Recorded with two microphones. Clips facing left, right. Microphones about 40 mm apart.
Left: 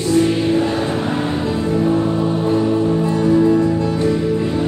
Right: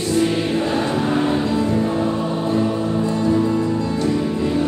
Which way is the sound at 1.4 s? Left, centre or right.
Left.